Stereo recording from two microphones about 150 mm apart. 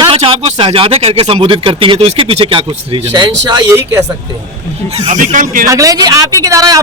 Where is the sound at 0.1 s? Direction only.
40° right (ahead or behind).